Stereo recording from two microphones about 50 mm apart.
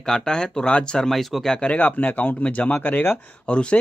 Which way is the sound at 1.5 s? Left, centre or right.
Left.